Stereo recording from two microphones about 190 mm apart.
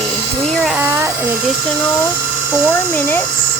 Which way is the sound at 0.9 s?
15° right (ahead or behind).